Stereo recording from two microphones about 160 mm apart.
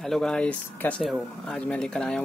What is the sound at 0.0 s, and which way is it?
Speech, 5° left (ahead or behind).